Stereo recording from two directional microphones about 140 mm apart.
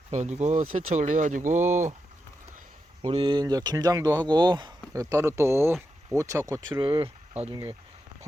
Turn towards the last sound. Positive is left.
turn(degrees=-45)  # may be behind; listen again after turning